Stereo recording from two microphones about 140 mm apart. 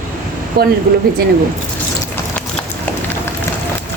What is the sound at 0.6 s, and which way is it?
Speech, 90° right.